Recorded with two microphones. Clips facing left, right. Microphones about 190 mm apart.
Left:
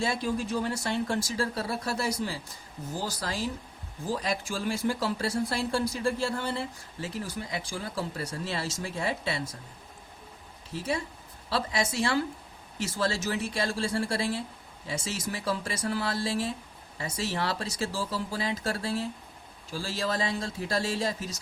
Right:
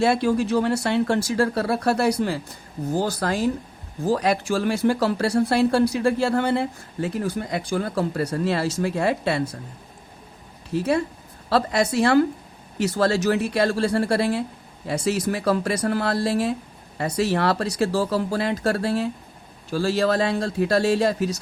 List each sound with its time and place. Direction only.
0.0 s speech: 70° right (ahead or behind)
10.7 s speech: 65° right (ahead or behind)